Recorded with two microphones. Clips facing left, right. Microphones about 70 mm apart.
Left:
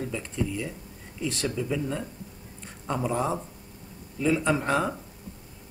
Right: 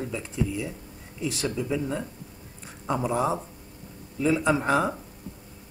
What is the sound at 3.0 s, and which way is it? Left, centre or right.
Speech, centre.